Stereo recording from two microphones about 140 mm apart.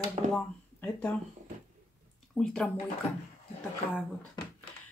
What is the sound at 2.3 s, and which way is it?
Speech, 5° left (ahead or behind).